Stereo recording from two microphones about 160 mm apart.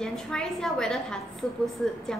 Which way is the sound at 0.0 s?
5° left (ahead or behind).